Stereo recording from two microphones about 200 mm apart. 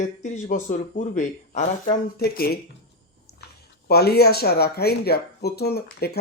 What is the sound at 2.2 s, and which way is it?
Speech, 50° left (ahead or behind).